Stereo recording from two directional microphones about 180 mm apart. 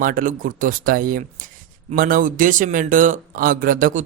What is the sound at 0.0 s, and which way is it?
Speech, 50° right (ahead or behind).